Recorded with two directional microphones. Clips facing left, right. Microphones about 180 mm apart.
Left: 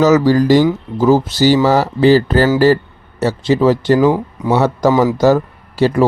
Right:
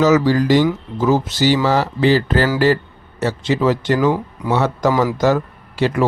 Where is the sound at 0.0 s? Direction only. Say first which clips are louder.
Left 3 dB; 40° left (ahead or behind).